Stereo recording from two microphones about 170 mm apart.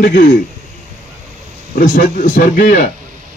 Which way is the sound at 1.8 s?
50° left (ahead or behind).